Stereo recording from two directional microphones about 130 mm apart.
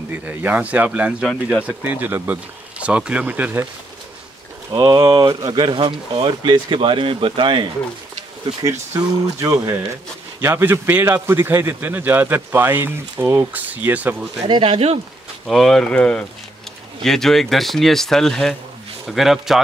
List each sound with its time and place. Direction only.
0.2 s a man's voice: 15° right (ahead or behind)
1.2 s speech: centre (ahead or behind)
1.7 s a man's voice: 15° right (ahead or behind)
4.6 s speech: 30° right (ahead or behind)
8.9 s a man's voice: 25° right (ahead or behind)
14.5 s speech: 45° right (ahead or behind)
15.4 s speech: centre (ahead or behind)